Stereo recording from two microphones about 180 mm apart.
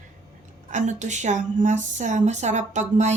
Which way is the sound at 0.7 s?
40° right (ahead or behind).